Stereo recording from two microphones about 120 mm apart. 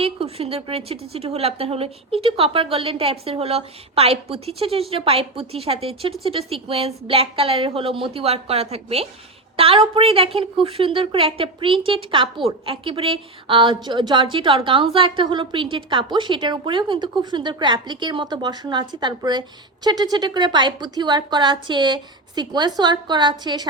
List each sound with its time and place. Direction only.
0.0 s a woman's voice: 55° right (ahead or behind); by 23.6 s 35° right (ahead or behind)